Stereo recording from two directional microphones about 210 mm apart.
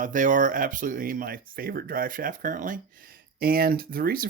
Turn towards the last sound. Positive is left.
turn(degrees=-45)  # may be behind; listen again after turning